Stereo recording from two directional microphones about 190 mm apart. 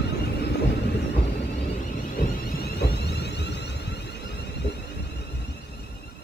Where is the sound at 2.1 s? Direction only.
50° left (ahead or behind).